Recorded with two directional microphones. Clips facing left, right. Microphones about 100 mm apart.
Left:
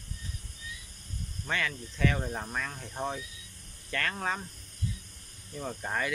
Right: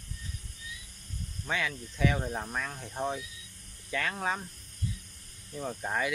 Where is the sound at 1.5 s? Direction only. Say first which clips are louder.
Even; 5° right (ahead or behind).